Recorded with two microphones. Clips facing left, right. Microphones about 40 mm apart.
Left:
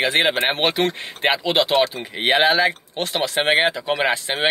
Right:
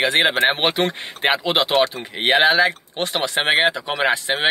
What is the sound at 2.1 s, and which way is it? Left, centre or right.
Speech, centre.